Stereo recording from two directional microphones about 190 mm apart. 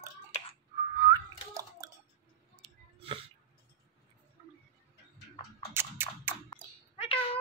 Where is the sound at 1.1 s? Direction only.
20° right (ahead or behind).